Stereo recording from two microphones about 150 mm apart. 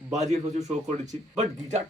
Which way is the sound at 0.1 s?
50° right (ahead or behind).